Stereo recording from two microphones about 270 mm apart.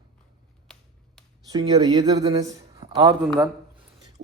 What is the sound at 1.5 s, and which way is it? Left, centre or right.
Speech, centre.